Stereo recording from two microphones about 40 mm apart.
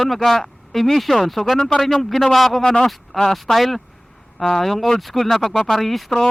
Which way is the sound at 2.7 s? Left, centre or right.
Centre.